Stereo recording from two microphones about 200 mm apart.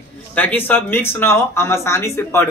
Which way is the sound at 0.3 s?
10° left (ahead or behind).